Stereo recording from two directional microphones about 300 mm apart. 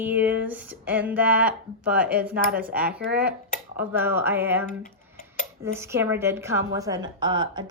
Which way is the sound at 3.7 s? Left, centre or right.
Centre.